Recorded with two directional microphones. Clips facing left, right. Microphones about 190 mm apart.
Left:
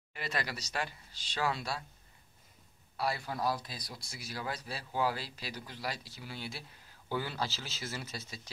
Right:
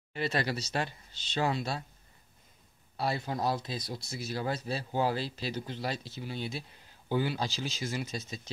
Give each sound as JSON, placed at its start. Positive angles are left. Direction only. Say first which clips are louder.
{"t": 0.1, "sound": "speech", "louder": "right 7 dB", "side_deg": -30}
{"t": 3.0, "sound": "speech", "louder": "right 3 dB", "side_deg": -25}